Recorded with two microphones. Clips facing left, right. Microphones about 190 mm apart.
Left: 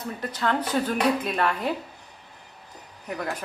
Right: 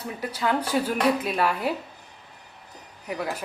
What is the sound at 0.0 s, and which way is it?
Speech, 10° right (ahead or behind).